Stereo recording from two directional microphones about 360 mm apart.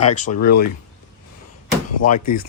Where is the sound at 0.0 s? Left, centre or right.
Centre.